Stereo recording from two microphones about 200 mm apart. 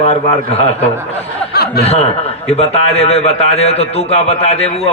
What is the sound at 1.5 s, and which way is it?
Chuckle, 50° left (ahead or behind).